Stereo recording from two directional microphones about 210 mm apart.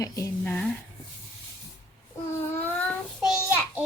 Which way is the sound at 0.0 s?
10° left (ahead or behind).